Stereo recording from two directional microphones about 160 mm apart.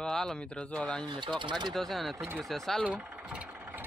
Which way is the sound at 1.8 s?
Centre (ahead or behind).